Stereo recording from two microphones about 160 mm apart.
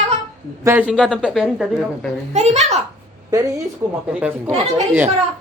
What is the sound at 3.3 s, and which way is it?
Speech, 20° right (ahead or behind).